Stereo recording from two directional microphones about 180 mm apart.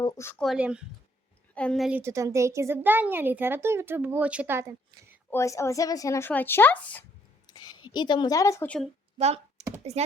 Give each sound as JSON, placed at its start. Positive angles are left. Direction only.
{"t": 0.0, "sound": "speech", "side_deg": 15}
{"t": 0.4, "sound": "speech", "side_deg": -5}
{"t": 2.0, "sound": "speech", "side_deg": -15}
{"t": 5.3, "sound": "speech", "side_deg": 15}
{"t": 7.4, "sound": "a woman's voice", "side_deg": 25}
{"t": 9.1, "sound": "computer keyboard", "side_deg": -35}
{"t": 9.9, "sound": "speech", "side_deg": -35}